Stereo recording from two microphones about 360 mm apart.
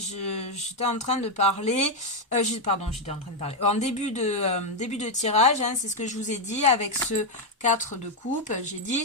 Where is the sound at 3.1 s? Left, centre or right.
Centre.